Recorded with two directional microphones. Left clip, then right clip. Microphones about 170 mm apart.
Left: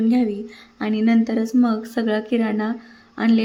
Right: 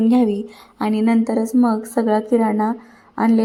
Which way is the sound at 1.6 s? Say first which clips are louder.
Right 3 dB; 15° left (ahead or behind).